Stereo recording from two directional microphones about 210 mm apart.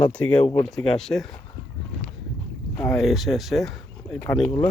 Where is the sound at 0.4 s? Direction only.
30° left (ahead or behind).